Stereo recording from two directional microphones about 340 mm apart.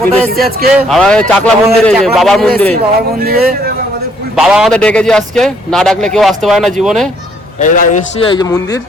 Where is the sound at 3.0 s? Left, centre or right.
Right.